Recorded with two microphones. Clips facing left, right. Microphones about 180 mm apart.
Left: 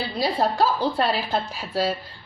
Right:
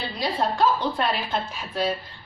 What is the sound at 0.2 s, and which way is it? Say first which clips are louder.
A woman's voice: left 2 dB; 35° left (ahead or behind).